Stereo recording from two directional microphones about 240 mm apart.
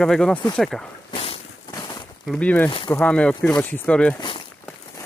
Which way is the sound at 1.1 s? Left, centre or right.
Left.